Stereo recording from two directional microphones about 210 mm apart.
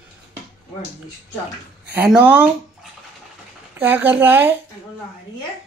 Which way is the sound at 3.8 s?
10° right (ahead or behind).